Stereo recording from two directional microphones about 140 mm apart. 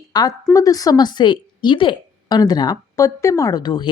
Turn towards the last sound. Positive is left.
turn(degrees=30)  # may be behind; listen again after turning